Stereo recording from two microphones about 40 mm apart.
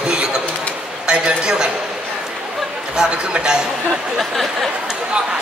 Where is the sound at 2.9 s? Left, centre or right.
Centre.